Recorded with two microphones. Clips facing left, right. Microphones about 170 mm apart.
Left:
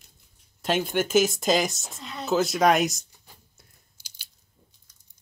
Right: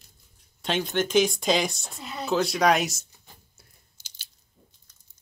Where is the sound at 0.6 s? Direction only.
5° left (ahead or behind).